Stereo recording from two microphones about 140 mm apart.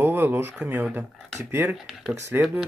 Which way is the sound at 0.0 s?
15° right (ahead or behind).